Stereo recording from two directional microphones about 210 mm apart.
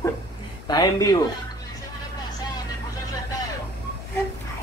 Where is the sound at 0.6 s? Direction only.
20° left (ahead or behind).